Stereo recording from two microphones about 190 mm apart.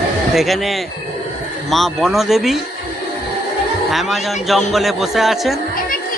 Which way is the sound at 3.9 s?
Centre (ahead or behind).